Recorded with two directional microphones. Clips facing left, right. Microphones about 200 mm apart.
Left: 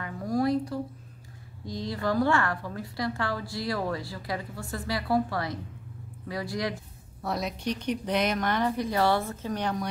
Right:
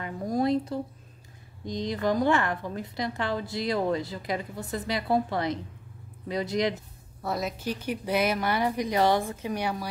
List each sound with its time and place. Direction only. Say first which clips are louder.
0.0 s a sound: even; 20° right (ahead or behind)
1.7 s a woman's voice: right 2 dB; 20° right (ahead or behind)
7.2 s speech: even; centre (ahead or behind)